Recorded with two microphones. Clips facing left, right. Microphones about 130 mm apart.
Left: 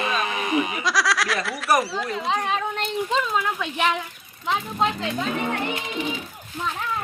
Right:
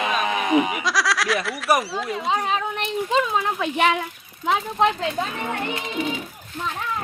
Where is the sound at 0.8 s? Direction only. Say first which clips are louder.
Even; centre (ahead or behind).